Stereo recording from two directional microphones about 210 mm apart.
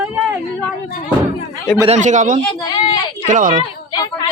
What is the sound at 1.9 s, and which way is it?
A woman's voice, 35° right (ahead or behind).